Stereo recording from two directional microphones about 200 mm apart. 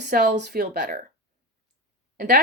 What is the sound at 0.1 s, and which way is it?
Speech, 45° right (ahead or behind).